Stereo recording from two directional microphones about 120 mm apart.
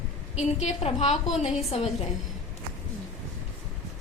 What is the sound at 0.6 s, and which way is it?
A woman's voice, 60° left (ahead or behind).